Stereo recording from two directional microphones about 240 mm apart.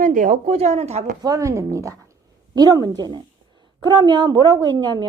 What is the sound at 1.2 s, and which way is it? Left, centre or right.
A woman's voice, centre.